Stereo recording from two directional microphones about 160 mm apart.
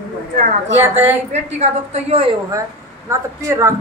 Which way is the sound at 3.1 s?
20° right (ahead or behind).